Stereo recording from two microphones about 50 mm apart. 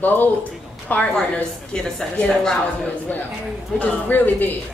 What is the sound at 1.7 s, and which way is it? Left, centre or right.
Speech, centre.